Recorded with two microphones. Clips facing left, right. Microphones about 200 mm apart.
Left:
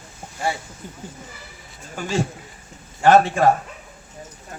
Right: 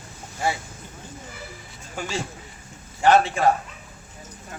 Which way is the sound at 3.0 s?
50° left (ahead or behind).